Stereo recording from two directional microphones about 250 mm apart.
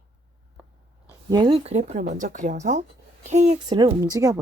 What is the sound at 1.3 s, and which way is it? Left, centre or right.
Speech, right.